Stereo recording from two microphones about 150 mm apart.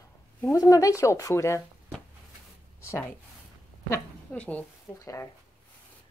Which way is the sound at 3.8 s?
10° left (ahead or behind).